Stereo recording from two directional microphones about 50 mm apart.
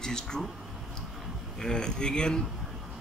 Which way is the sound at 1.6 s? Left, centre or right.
Centre.